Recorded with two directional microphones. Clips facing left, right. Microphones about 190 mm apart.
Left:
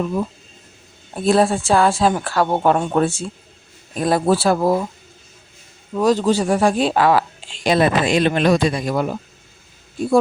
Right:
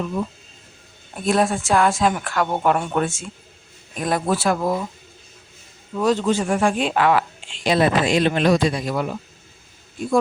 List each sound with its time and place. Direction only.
1.1 s speech: 30° left (ahead or behind)
5.9 s speech: 40° left (ahead or behind)